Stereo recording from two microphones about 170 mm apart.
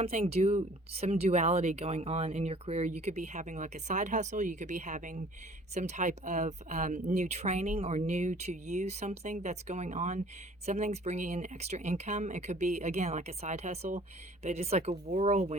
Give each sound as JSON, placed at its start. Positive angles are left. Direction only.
{"t": 0.0, "sound": "speech", "side_deg": -35}